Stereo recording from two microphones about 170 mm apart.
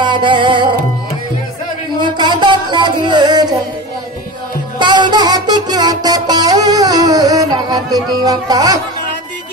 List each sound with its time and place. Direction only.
0.0 s music: 30° right (ahead or behind)
2.0 s music: 25° right (ahead or behind)
4.7 s music: 25° right (ahead or behind)